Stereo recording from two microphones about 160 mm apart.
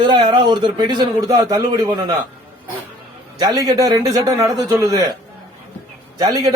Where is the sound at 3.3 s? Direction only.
25° right (ahead or behind).